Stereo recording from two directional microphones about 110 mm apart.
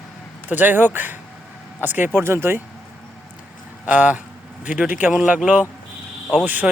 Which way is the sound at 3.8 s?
15° right (ahead or behind).